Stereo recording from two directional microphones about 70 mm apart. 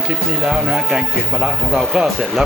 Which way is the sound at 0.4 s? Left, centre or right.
Centre.